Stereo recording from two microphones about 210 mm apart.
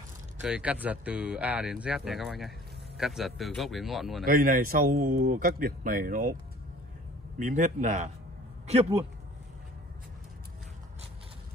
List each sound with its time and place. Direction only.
0.4 s speech: 5° right (ahead or behind)
4.3 s speech: 45° right (ahead or behind)
7.3 s a man's voice: 35° right (ahead or behind)